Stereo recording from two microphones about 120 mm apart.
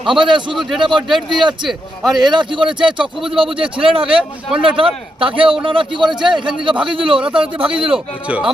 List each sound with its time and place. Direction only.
0.0 s a man's voice: 45° right (ahead or behind)
0.5 s a man's voice: centre (ahead or behind)
0.8 s a man's voice: 40° right (ahead or behind)
1.0 s a man's voice: centre (ahead or behind)
2.2 s a man's voice: 40° right (ahead or behind)
2.8 s a man's voice: 5° right (ahead or behind)
3.3 s a man's voice: 45° right (ahead or behind)
4.0 s speech: 5° right (ahead or behind)
4.8 s a man's voice: 45° right (ahead or behind)
7.9 s speech: 5° right (ahead or behind)